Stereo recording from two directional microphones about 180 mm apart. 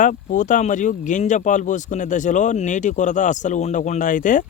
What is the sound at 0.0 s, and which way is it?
Speech, 45° left (ahead or behind).